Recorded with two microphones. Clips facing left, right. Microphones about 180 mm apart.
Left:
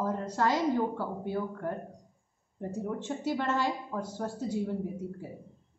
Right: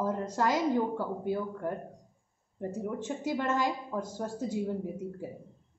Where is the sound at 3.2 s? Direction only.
15° right (ahead or behind).